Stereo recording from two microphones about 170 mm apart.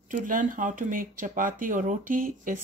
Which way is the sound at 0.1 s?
50° right (ahead or behind).